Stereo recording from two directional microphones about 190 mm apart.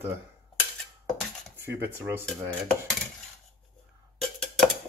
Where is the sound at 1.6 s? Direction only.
10° right (ahead or behind).